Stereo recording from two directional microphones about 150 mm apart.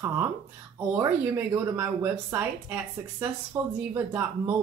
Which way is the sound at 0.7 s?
15° right (ahead or behind).